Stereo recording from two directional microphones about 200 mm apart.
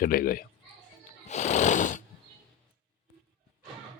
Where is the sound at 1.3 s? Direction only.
35° left (ahead or behind).